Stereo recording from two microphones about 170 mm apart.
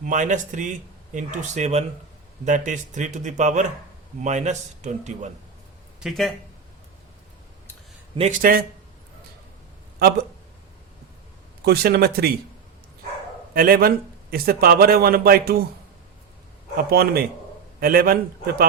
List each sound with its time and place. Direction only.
0.0 s speech: 45° right (ahead or behind)
6.0 s speech: centre (ahead or behind)
8.1 s a man's voice: 40° right (ahead or behind)
8.4 s a man's voice: 55° right (ahead or behind)
10.0 s speech: 70° right (ahead or behind)
11.6 s speech: 70° right (ahead or behind)
13.5 s a man's voice: 60° right (ahead or behind)
16.9 s a man's voice: 65° right (ahead or behind)